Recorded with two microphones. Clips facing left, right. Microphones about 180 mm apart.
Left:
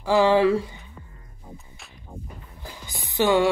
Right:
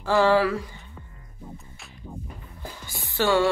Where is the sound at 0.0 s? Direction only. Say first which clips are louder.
Left 2 dB; 15° left (ahead or behind).